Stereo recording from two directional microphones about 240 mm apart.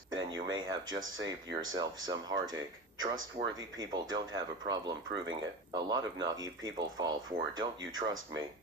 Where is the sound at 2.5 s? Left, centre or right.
Right.